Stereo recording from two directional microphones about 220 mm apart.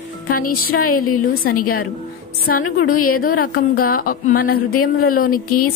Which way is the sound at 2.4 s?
40° left (ahead or behind).